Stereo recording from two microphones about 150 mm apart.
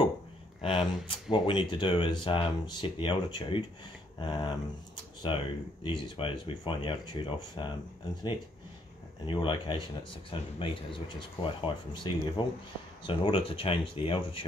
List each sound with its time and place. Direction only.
0.6 s speech: 35° left (ahead or behind)
4.9 s a sound: 30° left (ahead or behind)
5.9 s speech: 35° left (ahead or behind)